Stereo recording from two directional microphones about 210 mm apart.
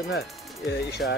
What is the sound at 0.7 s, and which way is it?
Speech, 50° left (ahead or behind).